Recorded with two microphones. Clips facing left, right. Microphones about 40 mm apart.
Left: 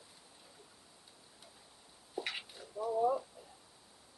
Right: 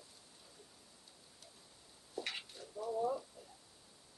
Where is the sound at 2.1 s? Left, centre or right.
Centre.